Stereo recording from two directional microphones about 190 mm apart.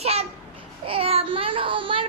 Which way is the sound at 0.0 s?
35° right (ahead or behind).